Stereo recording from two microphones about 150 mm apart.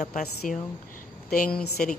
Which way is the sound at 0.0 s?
55° left (ahead or behind).